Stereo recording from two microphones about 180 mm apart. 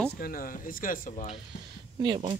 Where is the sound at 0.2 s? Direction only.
55° left (ahead or behind).